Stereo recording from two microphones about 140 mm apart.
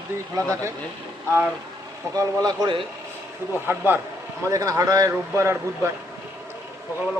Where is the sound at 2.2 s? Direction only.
30° right (ahead or behind).